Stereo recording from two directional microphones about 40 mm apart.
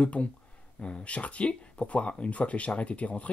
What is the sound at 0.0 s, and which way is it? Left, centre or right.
Speech, left.